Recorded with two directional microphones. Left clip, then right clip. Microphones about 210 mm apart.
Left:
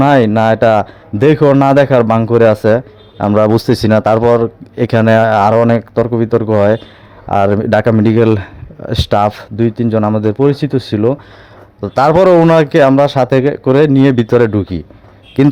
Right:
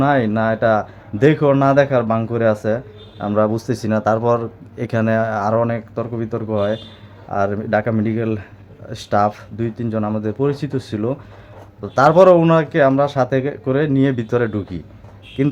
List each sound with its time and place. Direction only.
0.0 s a man's voice: 35° left (ahead or behind)